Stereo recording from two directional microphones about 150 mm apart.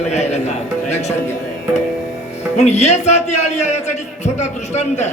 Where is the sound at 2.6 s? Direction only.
50° left (ahead or behind).